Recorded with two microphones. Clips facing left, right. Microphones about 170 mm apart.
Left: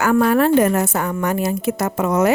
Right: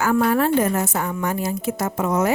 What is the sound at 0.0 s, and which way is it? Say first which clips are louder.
A woman's voice: left 3 dB; 70° left (ahead or behind).